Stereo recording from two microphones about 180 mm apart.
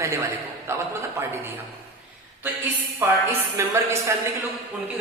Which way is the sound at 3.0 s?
10° right (ahead or behind).